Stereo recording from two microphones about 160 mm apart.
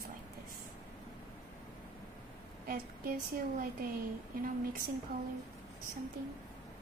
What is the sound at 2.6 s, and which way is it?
A woman's voice, 65° right (ahead or behind).